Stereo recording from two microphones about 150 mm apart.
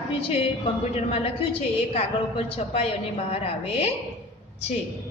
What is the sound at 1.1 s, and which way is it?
A woman's voice, 40° left (ahead or behind).